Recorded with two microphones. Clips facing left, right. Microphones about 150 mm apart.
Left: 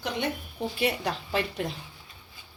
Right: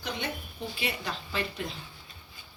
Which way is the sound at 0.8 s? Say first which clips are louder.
Left 7 dB; 65° left (ahead or behind).